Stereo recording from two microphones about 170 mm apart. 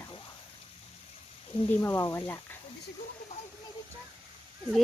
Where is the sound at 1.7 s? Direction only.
15° left (ahead or behind).